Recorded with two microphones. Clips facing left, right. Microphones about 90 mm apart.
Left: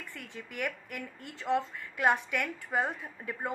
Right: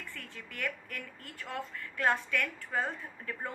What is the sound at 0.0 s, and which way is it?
A woman's voice, 15° left (ahead or behind).